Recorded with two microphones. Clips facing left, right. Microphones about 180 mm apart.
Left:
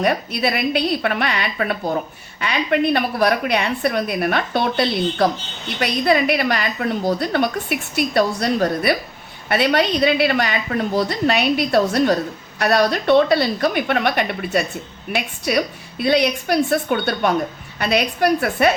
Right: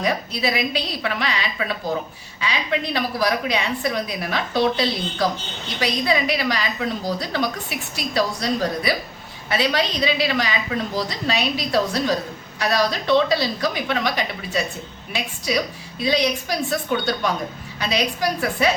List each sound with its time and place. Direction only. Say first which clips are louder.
0.0 s a woman's voice: left 3 dB; 60° left (ahead or behind)